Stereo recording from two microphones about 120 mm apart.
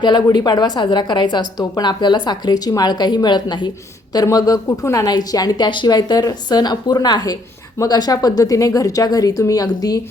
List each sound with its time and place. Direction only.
0.0 s a woman's voice: 35° left (ahead or behind)